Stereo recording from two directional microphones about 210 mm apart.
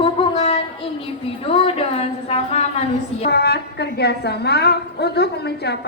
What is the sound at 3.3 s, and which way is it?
A woman's voice, 50° left (ahead or behind).